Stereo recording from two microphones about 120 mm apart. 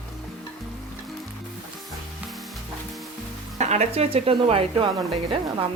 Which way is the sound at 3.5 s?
70° right (ahead or behind).